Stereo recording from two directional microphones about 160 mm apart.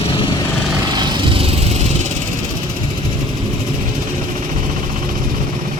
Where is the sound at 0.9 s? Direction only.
25° right (ahead or behind).